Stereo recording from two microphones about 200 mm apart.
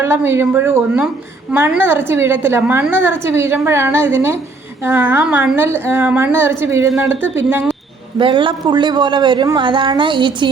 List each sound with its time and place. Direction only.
0.0 s a woman's voice: 10° right (ahead or behind)
7.1 s speech: 70° left (ahead or behind)
7.3 s a woman's voice: 10° right (ahead or behind)
8.2 s a woman's voice: 25° right (ahead or behind)